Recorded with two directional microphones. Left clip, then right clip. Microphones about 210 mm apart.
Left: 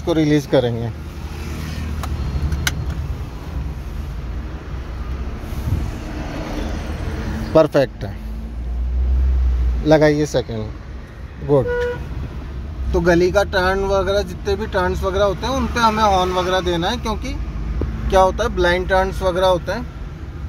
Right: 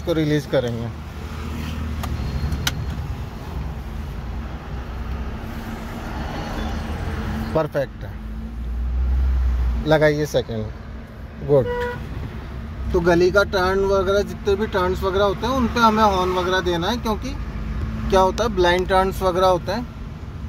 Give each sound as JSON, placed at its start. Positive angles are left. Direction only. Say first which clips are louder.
{"t": 0.0, "sound": "speech", "louder": "left 4 dB", "side_deg": 15}
{"t": 7.5, "sound": "speech", "louder": "left 9 dB", "side_deg": 30}
{"t": 9.8, "sound": "speech", "louder": "left 3 dB", "side_deg": 15}
{"t": 12.9, "sound": "speech", "louder": "left 1 dB", "side_deg": 0}